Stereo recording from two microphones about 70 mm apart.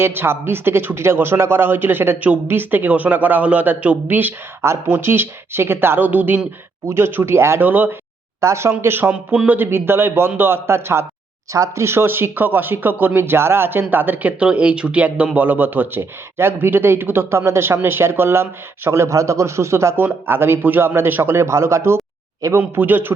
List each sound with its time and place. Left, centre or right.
0.0 s speech: right
4.6 s speech: right
6.8 s speech: right
9.1 s speech: centre
9.5 s a man's voice: right
22.4 s a man's voice: right
22.8 s speech: right